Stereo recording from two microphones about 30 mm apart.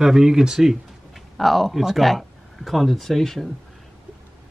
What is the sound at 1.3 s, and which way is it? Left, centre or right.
Speech, centre.